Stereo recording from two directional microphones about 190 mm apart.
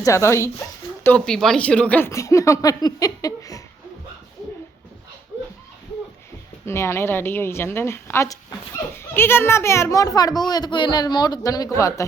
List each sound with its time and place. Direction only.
0.0 s speech: 15° left (ahead or behind)
6.7 s speech: 15° left (ahead or behind)